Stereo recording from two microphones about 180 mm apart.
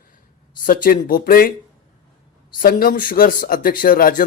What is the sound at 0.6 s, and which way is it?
Speech, 50° left (ahead or behind).